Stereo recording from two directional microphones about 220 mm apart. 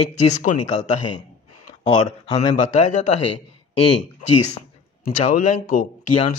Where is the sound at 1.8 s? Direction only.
30° left (ahead or behind).